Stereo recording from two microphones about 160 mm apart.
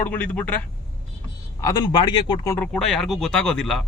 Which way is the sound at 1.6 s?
25° left (ahead or behind).